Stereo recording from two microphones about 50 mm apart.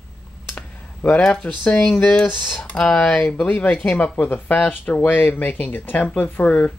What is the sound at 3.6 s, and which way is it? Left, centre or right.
Speech, left.